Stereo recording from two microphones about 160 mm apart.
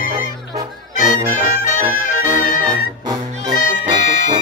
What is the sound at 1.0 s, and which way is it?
Music, 55° left (ahead or behind).